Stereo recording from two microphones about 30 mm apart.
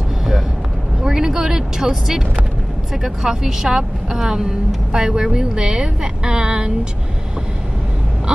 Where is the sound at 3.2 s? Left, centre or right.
Centre.